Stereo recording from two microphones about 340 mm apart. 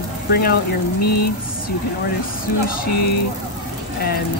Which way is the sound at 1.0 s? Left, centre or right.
Left.